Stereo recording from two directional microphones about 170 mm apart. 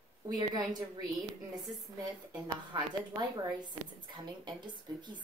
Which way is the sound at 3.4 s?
25° right (ahead or behind).